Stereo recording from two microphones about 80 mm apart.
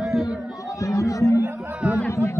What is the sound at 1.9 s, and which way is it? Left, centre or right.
Speech, left.